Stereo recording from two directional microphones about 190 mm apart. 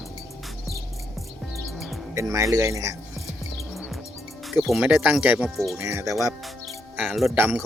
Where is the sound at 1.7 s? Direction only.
Centre (ahead or behind).